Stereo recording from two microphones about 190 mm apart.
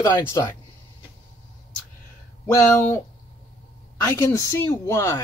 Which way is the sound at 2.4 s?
10° left (ahead or behind).